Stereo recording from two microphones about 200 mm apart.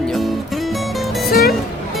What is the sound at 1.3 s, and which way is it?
Speech, 50° left (ahead or behind).